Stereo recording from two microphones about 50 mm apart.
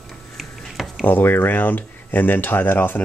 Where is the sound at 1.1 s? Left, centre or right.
Left.